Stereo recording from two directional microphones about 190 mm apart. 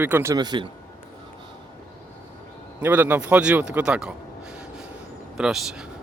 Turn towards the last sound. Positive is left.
turn(degrees=-5)  # may be behind; listen again after turning